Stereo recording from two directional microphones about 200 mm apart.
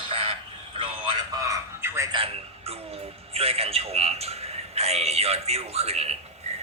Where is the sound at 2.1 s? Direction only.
30° right (ahead or behind).